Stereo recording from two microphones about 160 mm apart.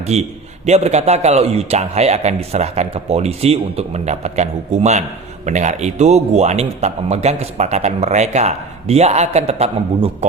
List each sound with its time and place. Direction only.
0.0 s a man's voice: 45° right (ahead or behind)